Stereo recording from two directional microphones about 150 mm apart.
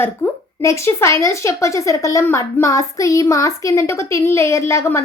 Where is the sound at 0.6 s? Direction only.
20° left (ahead or behind).